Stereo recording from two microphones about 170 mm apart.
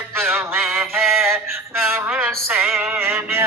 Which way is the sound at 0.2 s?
Centre (ahead or behind).